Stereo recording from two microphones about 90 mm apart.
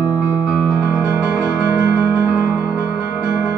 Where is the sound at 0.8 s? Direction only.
35° right (ahead or behind).